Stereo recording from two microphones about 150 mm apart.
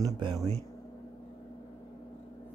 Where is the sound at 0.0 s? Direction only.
25° right (ahead or behind).